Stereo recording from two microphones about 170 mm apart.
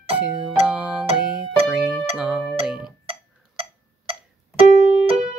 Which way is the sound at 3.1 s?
35° right (ahead or behind).